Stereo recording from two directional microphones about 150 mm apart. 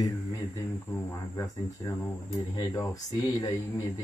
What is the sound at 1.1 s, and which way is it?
Speech, 20° left (ahead or behind).